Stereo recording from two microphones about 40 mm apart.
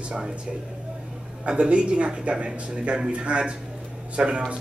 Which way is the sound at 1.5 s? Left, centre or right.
Right.